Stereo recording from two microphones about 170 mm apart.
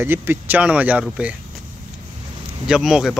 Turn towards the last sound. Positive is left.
turn(degrees=0)  # may be behind; listen again after turning